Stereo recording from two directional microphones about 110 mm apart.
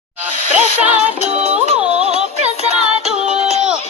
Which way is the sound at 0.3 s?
90° left.